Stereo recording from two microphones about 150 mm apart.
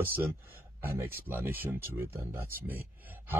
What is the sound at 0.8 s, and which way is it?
Speech, 15° right (ahead or behind).